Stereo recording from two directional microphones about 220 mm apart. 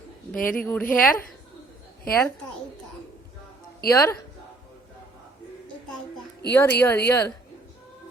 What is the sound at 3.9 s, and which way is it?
Speech, 10° left (ahead or behind).